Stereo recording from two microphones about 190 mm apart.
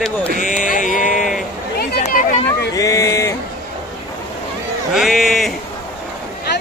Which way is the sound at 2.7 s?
15° left (ahead or behind).